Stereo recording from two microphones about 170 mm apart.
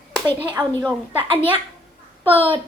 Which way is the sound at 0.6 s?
5° right (ahead or behind).